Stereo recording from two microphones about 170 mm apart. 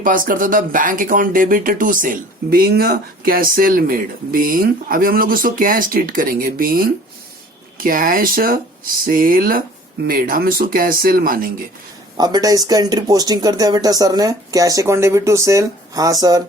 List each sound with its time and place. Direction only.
0.0 s speech: 55° right (ahead or behind)
12.1 s speech: 25° right (ahead or behind)